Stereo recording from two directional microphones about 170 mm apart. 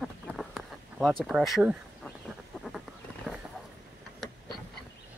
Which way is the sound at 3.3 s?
Centre (ahead or behind).